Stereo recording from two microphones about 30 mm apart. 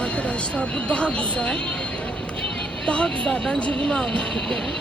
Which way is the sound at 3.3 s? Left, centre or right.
Left.